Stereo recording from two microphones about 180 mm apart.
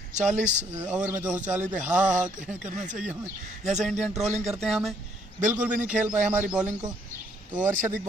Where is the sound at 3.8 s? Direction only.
Centre (ahead or behind).